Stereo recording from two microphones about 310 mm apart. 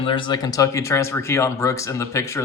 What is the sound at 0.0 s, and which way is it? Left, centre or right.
Speech, centre.